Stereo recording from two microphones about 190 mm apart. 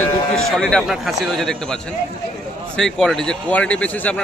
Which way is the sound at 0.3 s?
5° left (ahead or behind).